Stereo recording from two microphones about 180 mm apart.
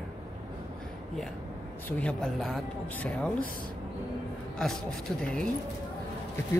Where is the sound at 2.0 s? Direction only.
Centre (ahead or behind).